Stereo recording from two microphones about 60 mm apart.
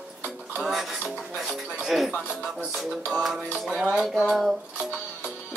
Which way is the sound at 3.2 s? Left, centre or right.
Centre.